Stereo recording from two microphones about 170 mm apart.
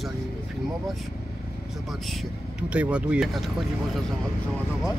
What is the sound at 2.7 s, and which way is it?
Speech, 5° right (ahead or behind).